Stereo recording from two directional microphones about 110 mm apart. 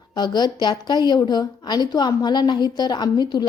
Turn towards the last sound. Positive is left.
turn(degrees=40)  # may be behind; listen again after turning